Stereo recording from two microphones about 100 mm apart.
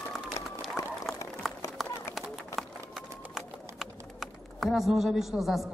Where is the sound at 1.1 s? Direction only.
Centre (ahead or behind).